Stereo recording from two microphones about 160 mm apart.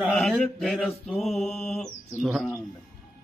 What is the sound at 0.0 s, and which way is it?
Mantra, centre (ahead or behind).